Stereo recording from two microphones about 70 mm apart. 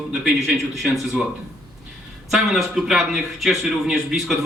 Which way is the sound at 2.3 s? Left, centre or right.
Centre.